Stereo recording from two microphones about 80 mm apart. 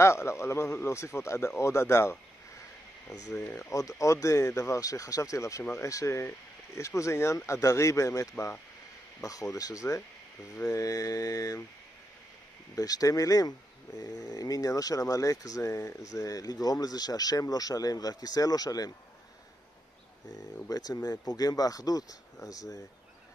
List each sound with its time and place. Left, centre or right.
0.0 s speech: left
3.4 s speech: left
3.7 s speech: left
12.7 s speech: left
20.6 s speech: left